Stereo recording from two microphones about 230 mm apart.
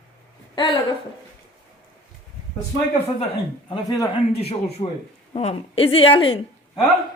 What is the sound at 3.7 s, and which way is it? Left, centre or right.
Speech, centre.